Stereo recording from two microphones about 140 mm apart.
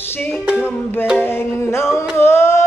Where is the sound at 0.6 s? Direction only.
15° left (ahead or behind).